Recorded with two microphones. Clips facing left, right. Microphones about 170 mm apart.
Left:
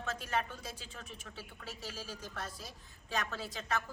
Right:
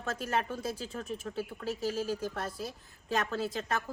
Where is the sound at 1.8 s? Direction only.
50° right (ahead or behind).